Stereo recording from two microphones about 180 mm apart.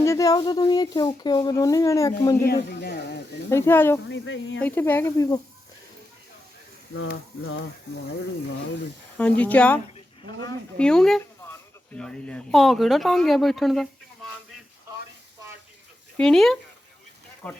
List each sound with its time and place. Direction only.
0.0 s speech: 15° left (ahead or behind)
2.4 s speech: 60° left (ahead or behind)
3.5 s speech: 15° left (ahead or behind)
4.1 s a sound: 90° left
4.6 s speech: 10° left (ahead or behind)
7.0 s a sound: 90° left
9.1 s speech: 10° left (ahead or behind)
16.1 s speech: 5° left (ahead or behind)